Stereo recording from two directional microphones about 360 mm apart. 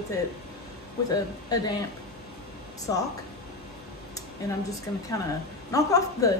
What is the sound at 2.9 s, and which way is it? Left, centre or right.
Speech, centre.